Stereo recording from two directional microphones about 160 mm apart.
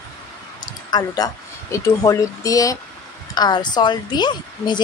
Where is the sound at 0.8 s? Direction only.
25° left (ahead or behind).